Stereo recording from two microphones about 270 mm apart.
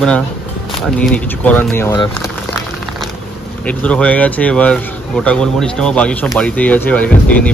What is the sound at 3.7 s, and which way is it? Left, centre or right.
Speech, centre.